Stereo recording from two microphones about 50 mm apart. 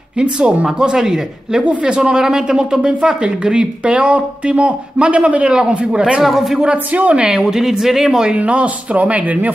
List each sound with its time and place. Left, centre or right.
0.2 s a woman's voice: right
6.2 s speech: centre
6.6 s speech: right
7.2 s a woman's voice: centre
8.4 s speech: right